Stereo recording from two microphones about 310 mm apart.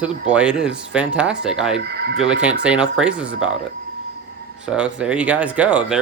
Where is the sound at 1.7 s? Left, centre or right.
Right.